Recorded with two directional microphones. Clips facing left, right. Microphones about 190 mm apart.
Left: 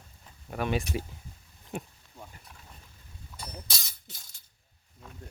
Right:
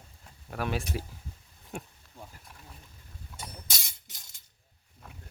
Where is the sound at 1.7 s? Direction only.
Centre (ahead or behind).